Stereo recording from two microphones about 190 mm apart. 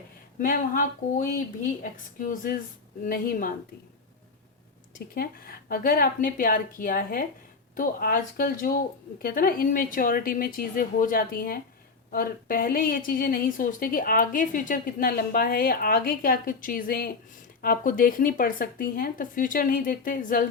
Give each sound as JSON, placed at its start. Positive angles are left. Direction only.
{"t": 0.3, "sound": "a woman's voice", "side_deg": 45}
{"t": 5.1, "sound": "a woman's voice", "side_deg": 50}